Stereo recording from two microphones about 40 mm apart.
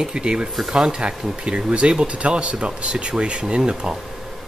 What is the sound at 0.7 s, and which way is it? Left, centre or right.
Speech, centre.